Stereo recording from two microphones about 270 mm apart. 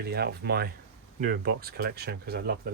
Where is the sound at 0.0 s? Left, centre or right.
Right.